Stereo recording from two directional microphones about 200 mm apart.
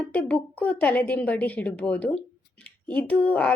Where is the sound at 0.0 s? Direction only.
5° left (ahead or behind).